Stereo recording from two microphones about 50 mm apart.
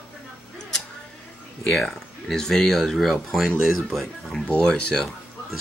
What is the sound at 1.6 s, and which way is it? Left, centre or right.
Speech, centre.